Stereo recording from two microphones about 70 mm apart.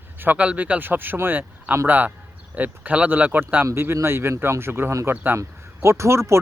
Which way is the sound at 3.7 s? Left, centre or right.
Right.